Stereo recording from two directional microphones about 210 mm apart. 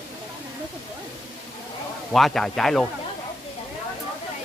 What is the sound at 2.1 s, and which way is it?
Speech, centre (ahead or behind).